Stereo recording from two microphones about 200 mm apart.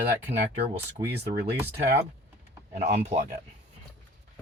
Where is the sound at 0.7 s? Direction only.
25° right (ahead or behind).